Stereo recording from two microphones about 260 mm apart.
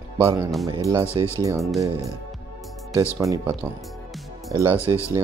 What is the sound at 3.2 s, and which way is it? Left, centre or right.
Speech, centre.